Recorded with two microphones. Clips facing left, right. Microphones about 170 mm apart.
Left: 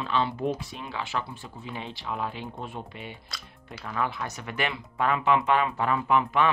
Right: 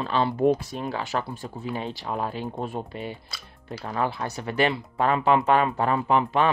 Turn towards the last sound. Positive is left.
turn(degrees=-35)  # may be behind; listen again after turning